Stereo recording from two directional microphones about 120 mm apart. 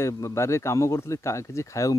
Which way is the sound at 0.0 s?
25° left (ahead or behind).